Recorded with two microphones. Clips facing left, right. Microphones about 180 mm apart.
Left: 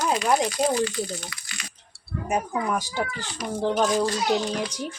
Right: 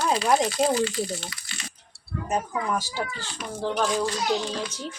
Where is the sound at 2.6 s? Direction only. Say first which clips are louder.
Left 2 dB; 15° left (ahead or behind).